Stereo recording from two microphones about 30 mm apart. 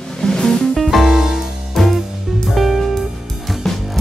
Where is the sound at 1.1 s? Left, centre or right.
Centre.